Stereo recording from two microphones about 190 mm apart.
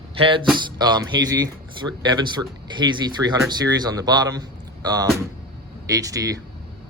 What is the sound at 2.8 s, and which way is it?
A man's voice, 20° right (ahead or behind).